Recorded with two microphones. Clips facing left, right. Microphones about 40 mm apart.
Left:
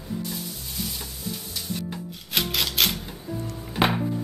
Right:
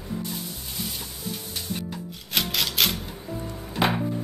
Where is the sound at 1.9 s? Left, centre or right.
Centre.